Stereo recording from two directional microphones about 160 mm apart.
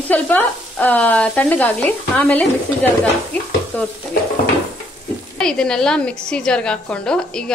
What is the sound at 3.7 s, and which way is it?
Stir, 10° left (ahead or behind).